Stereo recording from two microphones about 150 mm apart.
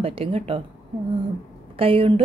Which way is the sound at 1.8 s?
40° right (ahead or behind).